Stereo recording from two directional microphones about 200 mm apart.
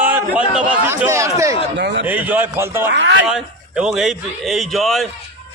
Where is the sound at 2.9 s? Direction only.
60° right (ahead or behind).